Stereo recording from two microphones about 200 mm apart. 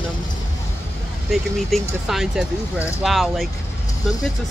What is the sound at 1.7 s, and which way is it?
Speech, centre (ahead or behind).